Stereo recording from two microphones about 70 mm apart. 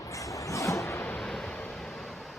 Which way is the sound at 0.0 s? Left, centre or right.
Left.